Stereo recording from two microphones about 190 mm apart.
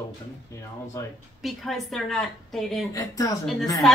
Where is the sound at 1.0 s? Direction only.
15° left (ahead or behind).